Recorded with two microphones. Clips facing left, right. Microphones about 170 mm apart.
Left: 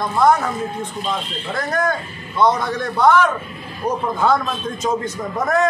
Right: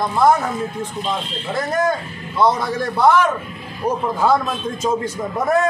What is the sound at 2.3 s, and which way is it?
A man's voice, 5° right (ahead or behind).